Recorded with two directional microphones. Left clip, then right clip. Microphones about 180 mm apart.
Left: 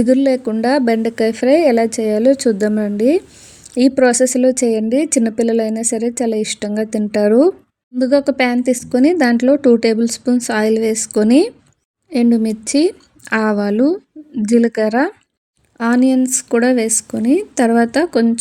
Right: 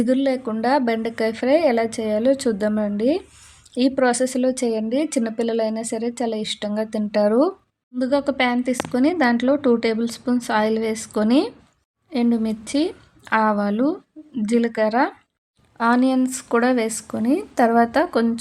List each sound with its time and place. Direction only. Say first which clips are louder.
0.0 s a woman's voice: left 7 dB; 50° left (ahead or behind)
15.8 s speech: left 4 dB; 40° left (ahead or behind)